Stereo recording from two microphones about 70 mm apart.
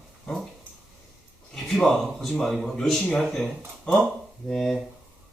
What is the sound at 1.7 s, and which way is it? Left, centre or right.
Speech, centre.